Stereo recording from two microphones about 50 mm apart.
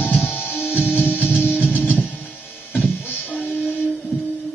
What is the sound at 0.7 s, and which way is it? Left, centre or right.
Music, centre.